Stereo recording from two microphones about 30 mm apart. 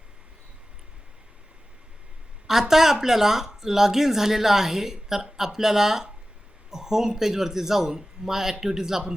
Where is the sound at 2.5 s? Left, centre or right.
Centre.